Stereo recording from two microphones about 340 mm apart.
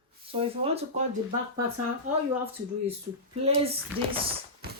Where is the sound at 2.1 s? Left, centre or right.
Right.